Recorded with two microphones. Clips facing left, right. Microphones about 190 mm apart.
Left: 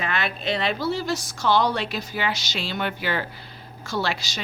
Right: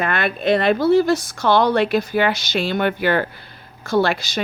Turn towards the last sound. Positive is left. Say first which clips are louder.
# right 9 dB
turn(degrees=-55)  # may be behind; listen again after turning